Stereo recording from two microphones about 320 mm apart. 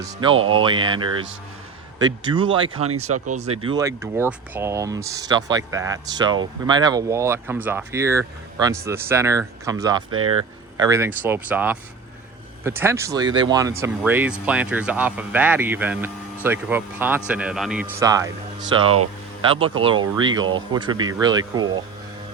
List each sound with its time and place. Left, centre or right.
0.0 s speech: centre
0.3 s speech: right
0.6 s speech: centre
10.1 s speech: right
10.8 s speech: centre
19.5 s speech: centre